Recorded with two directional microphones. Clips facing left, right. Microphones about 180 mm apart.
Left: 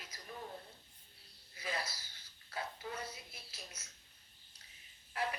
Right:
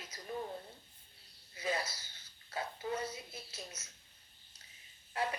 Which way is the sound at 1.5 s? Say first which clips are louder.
Right 5 dB; 25° right (ahead or behind).